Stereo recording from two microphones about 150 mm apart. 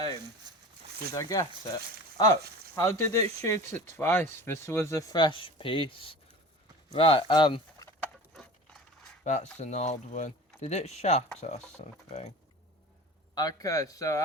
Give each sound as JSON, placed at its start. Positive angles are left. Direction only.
{"t": 0.5, "sound": "a sound", "side_deg": -30}
{"t": 1.1, "sound": "speech", "side_deg": 25}
{"t": 5.1, "sound": "speech", "side_deg": 35}
{"t": 8.0, "sound": "a sound", "side_deg": 5}
{"t": 9.2, "sound": "speech", "side_deg": 50}
{"t": 13.3, "sound": "speech", "side_deg": 25}